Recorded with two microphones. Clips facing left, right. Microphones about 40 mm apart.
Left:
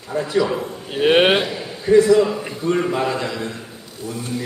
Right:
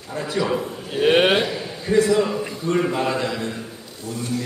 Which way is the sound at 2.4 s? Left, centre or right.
Centre.